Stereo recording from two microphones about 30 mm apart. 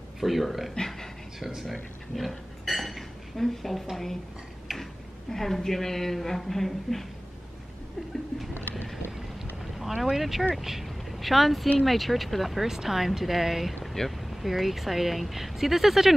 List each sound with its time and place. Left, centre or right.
0.2 s speech: centre
1.7 s dishes: centre
3.9 s a woman's voice: centre
5.3 s a woman's voice: centre
9.8 s speech: centre
12.6 s speech: centre
14.0 s speech: centre
14.3 s speech: centre